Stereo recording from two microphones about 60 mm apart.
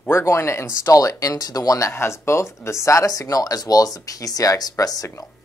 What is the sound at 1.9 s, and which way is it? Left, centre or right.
Speech, left.